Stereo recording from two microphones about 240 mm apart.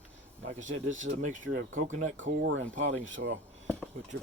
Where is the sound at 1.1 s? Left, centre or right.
Right.